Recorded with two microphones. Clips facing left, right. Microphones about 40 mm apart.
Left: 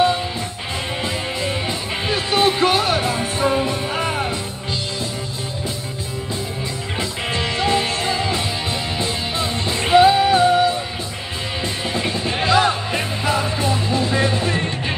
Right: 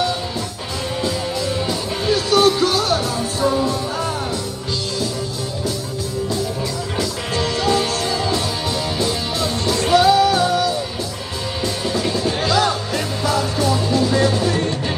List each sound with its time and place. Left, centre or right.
1.7 s music: left
7.0 s music: left